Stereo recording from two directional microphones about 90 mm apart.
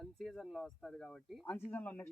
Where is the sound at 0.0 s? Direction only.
5° left (ahead or behind).